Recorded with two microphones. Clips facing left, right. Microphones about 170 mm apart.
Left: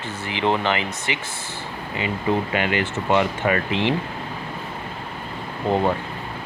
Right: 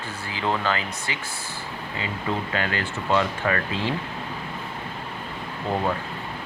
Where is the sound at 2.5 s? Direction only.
15° left (ahead or behind).